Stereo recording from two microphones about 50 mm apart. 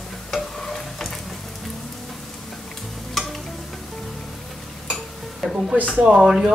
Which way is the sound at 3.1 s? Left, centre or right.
Centre.